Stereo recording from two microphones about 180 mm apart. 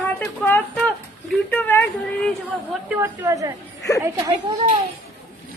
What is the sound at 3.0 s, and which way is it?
Speech, 20° right (ahead or behind).